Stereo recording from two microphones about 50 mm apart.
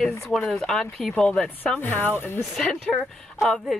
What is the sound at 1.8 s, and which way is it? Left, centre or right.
Speech, left.